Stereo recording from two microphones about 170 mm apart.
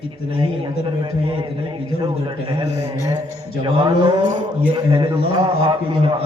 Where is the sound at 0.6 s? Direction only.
30° right (ahead or behind).